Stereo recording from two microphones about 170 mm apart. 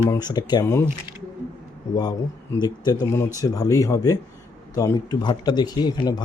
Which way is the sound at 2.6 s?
20° left (ahead or behind).